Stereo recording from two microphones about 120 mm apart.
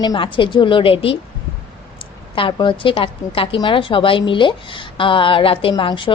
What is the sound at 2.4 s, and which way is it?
A woman's voice, 45° left (ahead or behind).